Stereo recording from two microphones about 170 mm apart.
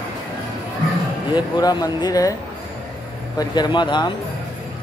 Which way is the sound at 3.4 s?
25° left (ahead or behind).